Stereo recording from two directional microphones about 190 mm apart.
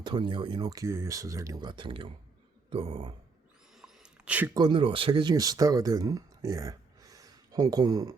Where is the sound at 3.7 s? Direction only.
5° right (ahead or behind).